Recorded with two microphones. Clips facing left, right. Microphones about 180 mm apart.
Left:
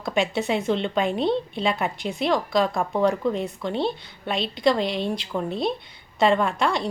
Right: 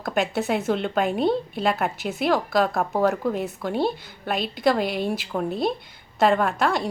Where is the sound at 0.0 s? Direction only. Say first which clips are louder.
Even; centre (ahead or behind).